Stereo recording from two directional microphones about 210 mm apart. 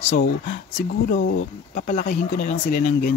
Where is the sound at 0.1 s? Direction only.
35° left (ahead or behind).